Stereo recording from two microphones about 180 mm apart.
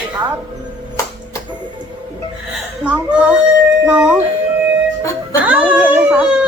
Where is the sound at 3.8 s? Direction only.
5° right (ahead or behind).